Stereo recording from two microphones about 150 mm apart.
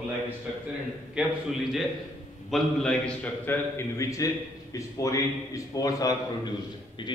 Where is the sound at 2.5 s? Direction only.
5° left (ahead or behind).